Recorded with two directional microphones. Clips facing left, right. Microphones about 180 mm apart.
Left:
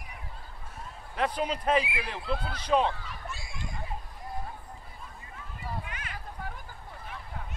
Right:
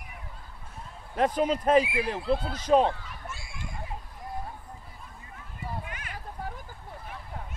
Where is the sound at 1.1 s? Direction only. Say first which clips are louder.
Right 5 dB; 45° right (ahead or behind).